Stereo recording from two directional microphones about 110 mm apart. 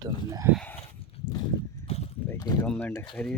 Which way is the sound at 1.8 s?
65° left (ahead or behind).